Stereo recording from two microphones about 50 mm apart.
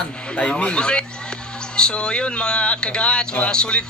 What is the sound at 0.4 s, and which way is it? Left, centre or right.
Speech, left.